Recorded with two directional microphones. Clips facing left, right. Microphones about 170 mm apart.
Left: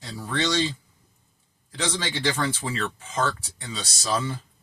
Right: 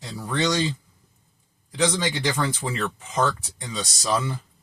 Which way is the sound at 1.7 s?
10° right (ahead or behind).